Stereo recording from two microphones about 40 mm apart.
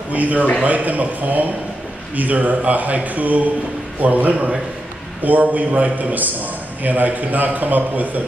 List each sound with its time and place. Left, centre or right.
0.1 s a man's voice: right